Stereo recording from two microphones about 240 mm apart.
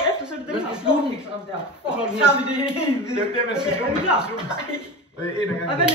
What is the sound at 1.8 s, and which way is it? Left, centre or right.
A man's voice, centre.